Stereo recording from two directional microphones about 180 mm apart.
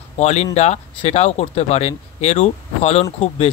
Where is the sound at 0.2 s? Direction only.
40° left (ahead or behind).